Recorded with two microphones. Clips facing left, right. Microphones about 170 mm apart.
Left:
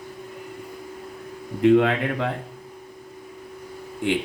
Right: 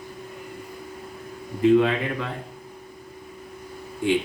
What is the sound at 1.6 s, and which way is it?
Speech, 60° left (ahead or behind).